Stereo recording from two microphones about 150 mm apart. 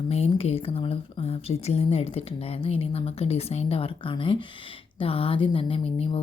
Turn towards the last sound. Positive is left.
turn(degrees=40)  # may be behind; listen again after turning